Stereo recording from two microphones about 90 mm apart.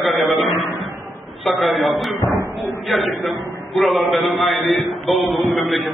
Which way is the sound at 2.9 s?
Centre (ahead or behind).